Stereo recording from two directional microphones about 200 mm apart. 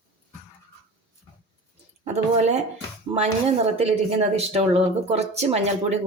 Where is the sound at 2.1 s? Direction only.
35° right (ahead or behind).